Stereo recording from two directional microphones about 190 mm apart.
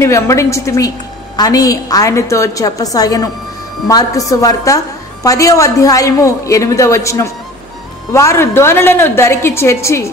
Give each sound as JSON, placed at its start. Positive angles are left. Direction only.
{"t": 0.0, "sound": "a woman's voice", "side_deg": 15}